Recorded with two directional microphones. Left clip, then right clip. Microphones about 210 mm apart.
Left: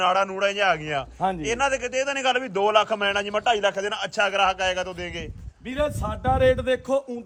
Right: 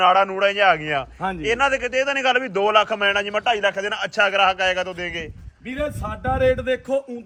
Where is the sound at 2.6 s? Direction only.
20° left (ahead or behind).